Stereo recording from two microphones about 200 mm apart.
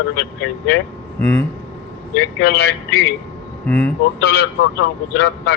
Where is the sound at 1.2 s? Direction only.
10° left (ahead or behind).